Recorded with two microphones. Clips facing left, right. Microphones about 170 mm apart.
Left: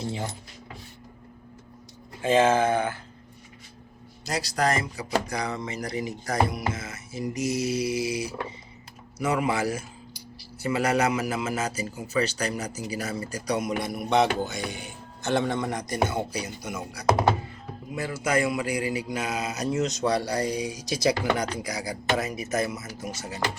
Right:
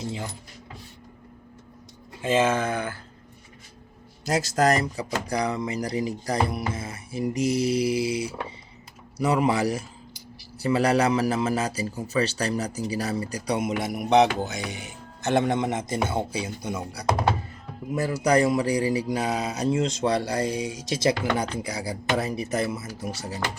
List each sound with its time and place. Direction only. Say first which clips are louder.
2.4 s speech: left 4 dB; 30° left (ahead or behind)
4.4 s a man's voice: right 4 dB; 40° right (ahead or behind)